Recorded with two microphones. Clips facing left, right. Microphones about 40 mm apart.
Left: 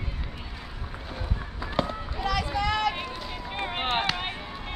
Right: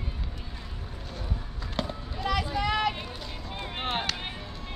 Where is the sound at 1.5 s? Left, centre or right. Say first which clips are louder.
Left 6 dB; centre.